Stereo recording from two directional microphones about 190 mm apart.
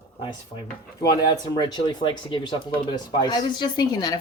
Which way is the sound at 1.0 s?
20° left (ahead or behind).